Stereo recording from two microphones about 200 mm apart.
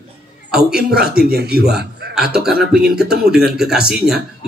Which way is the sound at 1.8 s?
55° right (ahead or behind).